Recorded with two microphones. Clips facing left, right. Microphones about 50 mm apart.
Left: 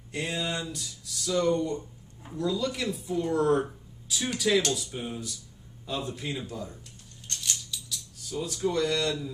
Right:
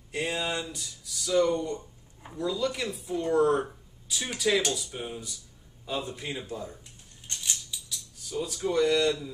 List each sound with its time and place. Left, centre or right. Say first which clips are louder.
0.1 s a man's voice: right 1 dB; centre
7.2 s a sound: left 1 dB; centre
7.7 s cutlery: left 1 dB; centre
8.6 s a man's voice: right 3 dB; centre